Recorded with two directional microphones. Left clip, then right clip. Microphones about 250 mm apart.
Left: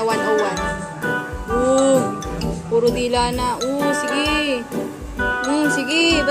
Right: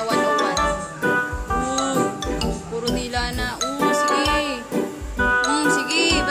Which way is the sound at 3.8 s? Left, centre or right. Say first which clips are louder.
Right 3 dB; centre.